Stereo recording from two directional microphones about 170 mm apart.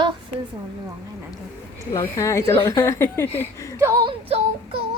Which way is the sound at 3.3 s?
15° right (ahead or behind).